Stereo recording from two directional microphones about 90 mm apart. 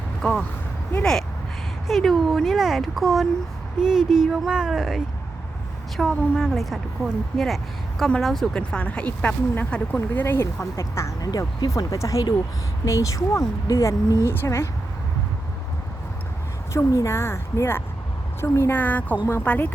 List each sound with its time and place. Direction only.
0.2 s speech: 5° left (ahead or behind)
1.9 s a woman's voice: centre (ahead or behind)
8.5 s speech: 15° left (ahead or behind)
10.2 s speech: 30° left (ahead or behind)
11.3 s a woman's voice: 45° left (ahead or behind)
16.7 s a woman's voice: 35° left (ahead or behind)